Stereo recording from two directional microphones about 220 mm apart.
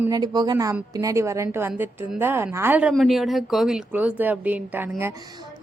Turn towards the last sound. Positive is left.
turn(degrees=-10)  # may be behind; listen again after turning